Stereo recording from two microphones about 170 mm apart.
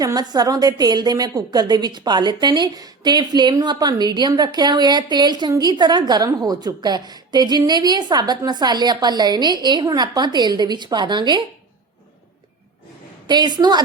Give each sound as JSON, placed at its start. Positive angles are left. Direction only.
{"t": 0.0, "sound": "a woman's voice", "side_deg": -20}
{"t": 13.2, "sound": "a woman's voice", "side_deg": -25}